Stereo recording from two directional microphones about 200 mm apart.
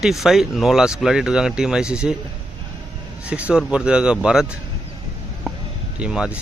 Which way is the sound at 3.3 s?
5° right (ahead or behind).